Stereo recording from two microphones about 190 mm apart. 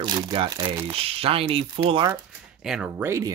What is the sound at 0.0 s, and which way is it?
Speech, 25° right (ahead or behind).